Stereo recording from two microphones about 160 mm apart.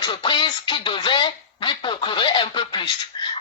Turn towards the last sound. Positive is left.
turn(degrees=30)  # may be behind; listen again after turning